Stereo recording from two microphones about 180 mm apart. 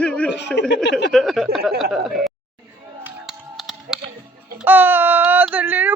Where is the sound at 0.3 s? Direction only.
75° left (ahead or behind).